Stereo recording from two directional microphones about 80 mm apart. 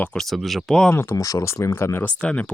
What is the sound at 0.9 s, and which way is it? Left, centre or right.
Speech, left.